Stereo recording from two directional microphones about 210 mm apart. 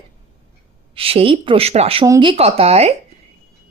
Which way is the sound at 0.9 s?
25° right (ahead or behind).